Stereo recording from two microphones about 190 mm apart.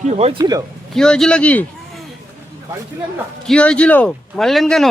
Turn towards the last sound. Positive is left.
turn(degrees=0)  # may be behind; listen again after turning